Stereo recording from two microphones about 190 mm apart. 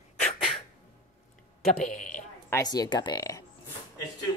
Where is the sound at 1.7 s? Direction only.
40° left (ahead or behind).